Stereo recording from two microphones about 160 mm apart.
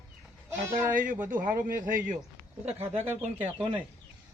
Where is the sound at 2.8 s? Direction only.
10° right (ahead or behind).